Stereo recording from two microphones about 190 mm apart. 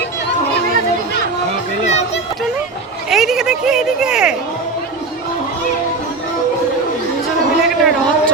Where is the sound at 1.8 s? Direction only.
35° left (ahead or behind).